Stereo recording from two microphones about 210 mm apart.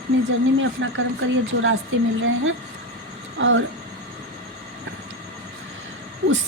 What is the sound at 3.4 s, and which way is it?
Speech, 65° right (ahead or behind).